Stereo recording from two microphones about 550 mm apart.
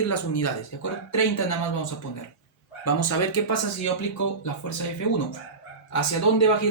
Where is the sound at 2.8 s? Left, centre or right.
Left.